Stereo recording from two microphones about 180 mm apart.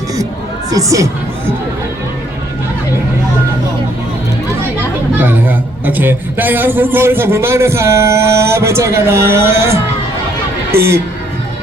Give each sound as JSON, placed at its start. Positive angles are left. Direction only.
{"t": 0.7, "sound": "a man's voice", "side_deg": -20}
{"t": 5.1, "sound": "a man's voice", "side_deg": -10}